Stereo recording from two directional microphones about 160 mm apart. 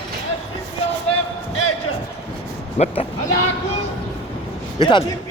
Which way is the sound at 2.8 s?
45° left (ahead or behind).